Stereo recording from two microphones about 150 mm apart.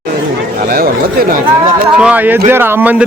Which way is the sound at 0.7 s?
75° right (ahead or behind).